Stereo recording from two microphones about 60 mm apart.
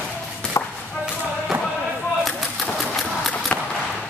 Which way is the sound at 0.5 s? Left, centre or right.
Left.